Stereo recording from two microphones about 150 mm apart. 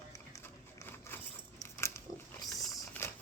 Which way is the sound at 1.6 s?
20° left (ahead or behind).